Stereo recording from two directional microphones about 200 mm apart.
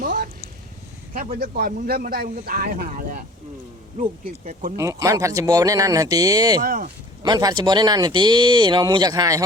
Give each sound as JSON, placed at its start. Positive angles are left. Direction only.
{"t": 0.0, "sound": "a sound", "side_deg": -40}
{"t": 1.1, "sound": "a man's voice", "side_deg": -40}
{"t": 4.8, "sound": "speech", "side_deg": -15}
{"t": 6.6, "sound": "a man's voice", "side_deg": -45}
{"t": 7.2, "sound": "speech", "side_deg": -20}